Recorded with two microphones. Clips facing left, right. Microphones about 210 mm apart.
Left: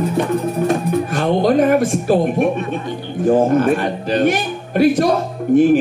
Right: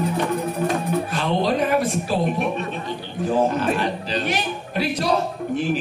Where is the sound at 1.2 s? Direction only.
50° left (ahead or behind).